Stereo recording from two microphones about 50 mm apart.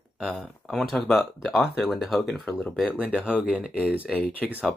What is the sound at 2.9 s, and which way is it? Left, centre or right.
Speech, right.